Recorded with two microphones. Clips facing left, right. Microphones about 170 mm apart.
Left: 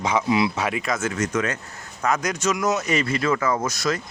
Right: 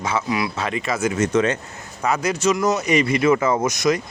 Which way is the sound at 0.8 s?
10° right (ahead or behind).